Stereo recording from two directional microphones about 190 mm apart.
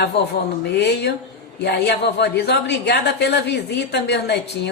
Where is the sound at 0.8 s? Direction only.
60° left (ahead or behind).